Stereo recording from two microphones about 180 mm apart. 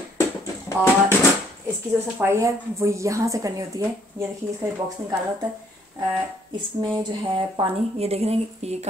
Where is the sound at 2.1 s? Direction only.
15° right (ahead or behind).